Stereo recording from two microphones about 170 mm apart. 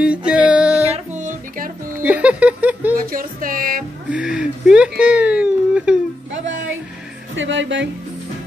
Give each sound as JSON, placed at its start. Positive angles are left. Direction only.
{"t": 0.0, "sound": "music", "side_deg": -5}
{"t": 0.9, "sound": "music", "side_deg": -45}
{"t": 2.0, "sound": "a sound", "side_deg": -5}
{"t": 3.1, "sound": "music", "side_deg": -55}
{"t": 4.1, "sound": "a sound", "side_deg": -5}
{"t": 7.3, "sound": "speech", "side_deg": -90}